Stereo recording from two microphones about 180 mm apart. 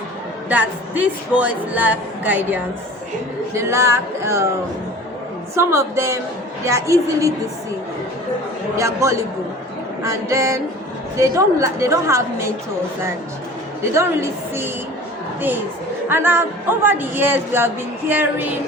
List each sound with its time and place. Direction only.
0.4 s speech: 10° right (ahead or behind)
5.5 s speech: 15° right (ahead or behind)
8.7 s speech: 15° right (ahead or behind)
13.9 s speech: 15° right (ahead or behind)
16.0 s speech: 10° right (ahead or behind)